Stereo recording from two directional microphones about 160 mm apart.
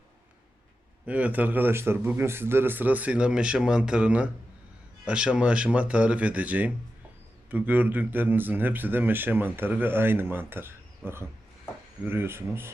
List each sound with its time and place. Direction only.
1.0 s speech: 10° right (ahead or behind)